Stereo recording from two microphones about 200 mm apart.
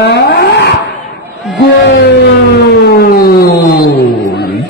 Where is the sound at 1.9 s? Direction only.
55° left (ahead or behind).